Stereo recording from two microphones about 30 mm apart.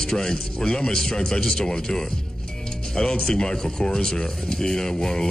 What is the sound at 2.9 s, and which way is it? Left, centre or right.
Speech, left.